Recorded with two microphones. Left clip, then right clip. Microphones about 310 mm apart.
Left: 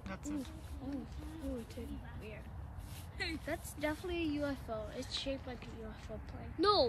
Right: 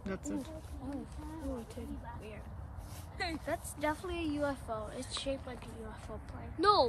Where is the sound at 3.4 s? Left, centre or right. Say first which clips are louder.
Right 5 dB; centre.